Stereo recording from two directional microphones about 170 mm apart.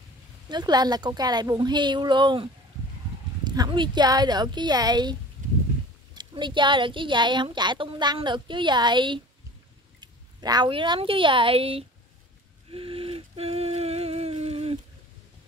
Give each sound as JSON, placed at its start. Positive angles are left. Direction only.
{"t": 0.5, "sound": "a woman's voice", "side_deg": -25}
{"t": 6.1, "sound": "a woman's voice", "side_deg": -25}
{"t": 12.7, "sound": "a sound", "side_deg": -35}